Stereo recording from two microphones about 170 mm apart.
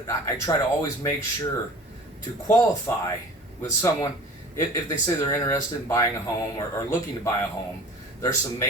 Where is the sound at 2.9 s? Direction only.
15° left (ahead or behind).